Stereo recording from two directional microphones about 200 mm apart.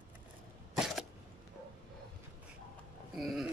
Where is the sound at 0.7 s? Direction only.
Centre (ahead or behind).